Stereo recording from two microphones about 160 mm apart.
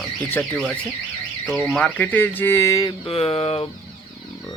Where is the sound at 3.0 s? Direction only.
40° left (ahead or behind).